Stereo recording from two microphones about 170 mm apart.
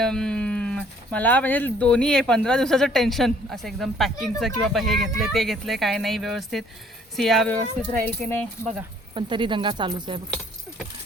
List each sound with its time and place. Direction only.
0.0 s speech: 5° left (ahead or behind)
9.1 s speech: 30° right (ahead or behind)